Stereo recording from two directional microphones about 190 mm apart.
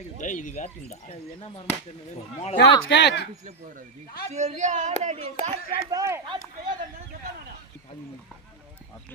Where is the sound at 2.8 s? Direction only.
65° left (ahead or behind).